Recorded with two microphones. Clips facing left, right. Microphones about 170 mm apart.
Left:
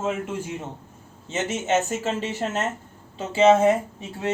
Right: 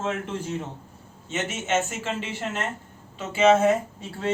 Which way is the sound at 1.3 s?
35° left (ahead or behind).